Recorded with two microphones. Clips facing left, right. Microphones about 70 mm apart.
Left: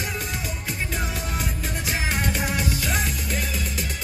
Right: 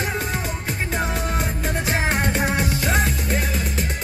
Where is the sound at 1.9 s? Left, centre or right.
Right.